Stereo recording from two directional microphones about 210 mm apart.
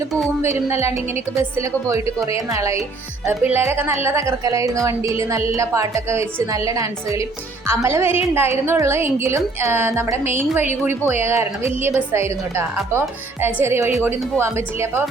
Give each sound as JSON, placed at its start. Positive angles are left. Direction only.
{"t": 0.4, "sound": "a woman's voice", "side_deg": -15}